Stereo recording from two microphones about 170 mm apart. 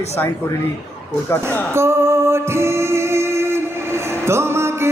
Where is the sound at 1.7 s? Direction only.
15° right (ahead or behind).